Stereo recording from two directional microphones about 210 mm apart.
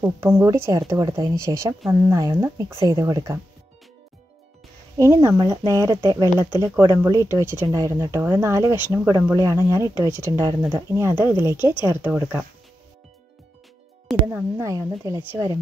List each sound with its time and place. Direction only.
0.0 s speech: 10° right (ahead or behind)
4.9 s speech: 15° right (ahead or behind)
14.2 s speech: 15° right (ahead or behind)